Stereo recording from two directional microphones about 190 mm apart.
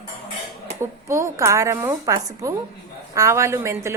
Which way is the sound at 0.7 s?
15° right (ahead or behind).